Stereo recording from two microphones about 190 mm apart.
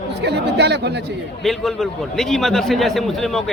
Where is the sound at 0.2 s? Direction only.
60° right (ahead or behind).